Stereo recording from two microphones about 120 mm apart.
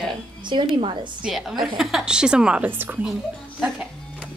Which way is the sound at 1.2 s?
5° right (ahead or behind).